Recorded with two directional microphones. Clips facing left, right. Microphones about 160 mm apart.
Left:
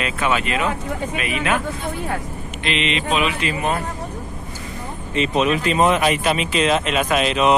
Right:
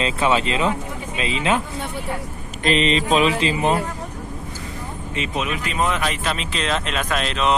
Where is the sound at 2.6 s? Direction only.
40° right (ahead or behind).